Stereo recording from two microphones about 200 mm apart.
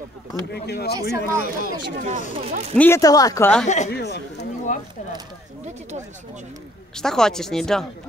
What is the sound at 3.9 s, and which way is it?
Speech, 55° left (ahead or behind).